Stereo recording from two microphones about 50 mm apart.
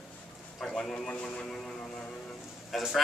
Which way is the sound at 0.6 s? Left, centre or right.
Centre.